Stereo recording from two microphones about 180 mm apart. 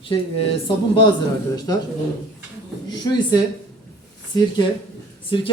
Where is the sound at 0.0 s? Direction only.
30° left (ahead or behind).